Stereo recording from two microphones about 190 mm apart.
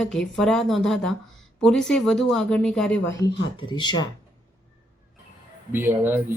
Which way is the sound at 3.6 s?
25° left (ahead or behind).